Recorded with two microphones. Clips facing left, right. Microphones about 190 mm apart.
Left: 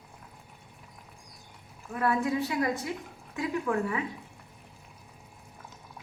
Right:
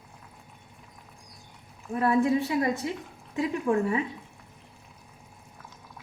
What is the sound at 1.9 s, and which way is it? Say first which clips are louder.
A woman's voice: right 5 dB; 25° right (ahead or behind).